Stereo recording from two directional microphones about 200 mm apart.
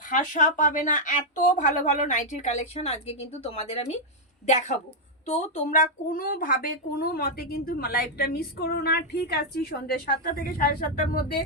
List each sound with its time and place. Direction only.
0.2 s a woman's voice: 40° left (ahead or behind)